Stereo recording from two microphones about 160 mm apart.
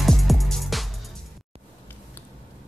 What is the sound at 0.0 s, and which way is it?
Music, centre (ahead or behind).